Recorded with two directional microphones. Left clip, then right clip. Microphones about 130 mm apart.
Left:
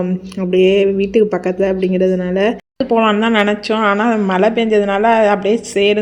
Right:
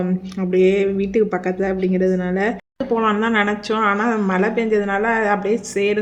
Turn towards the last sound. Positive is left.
turn(degrees=25)  # may be behind; listen again after turning